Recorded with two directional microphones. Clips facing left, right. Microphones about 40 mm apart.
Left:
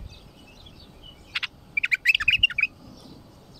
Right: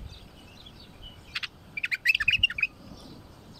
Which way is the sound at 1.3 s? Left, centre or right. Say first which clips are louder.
Left 7 dB; left.